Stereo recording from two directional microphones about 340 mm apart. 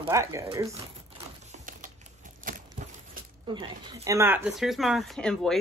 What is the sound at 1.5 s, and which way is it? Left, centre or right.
Typing, right.